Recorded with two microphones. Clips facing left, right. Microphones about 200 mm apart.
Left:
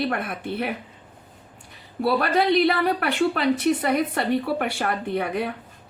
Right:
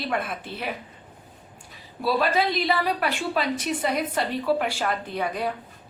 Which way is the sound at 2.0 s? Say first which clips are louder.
Left 2 dB; 60° left (ahead or behind).